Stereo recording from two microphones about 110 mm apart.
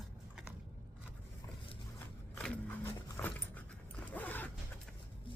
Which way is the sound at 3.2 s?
25° left (ahead or behind).